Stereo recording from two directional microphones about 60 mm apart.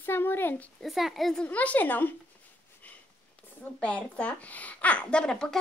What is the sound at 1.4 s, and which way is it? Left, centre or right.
Speech, left.